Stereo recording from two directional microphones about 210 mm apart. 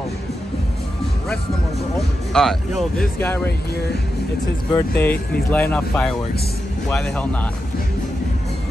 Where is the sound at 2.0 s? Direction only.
Centre (ahead or behind).